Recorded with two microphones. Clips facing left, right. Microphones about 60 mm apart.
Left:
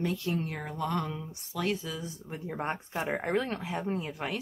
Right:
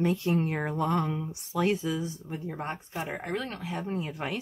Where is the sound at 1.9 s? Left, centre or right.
Centre.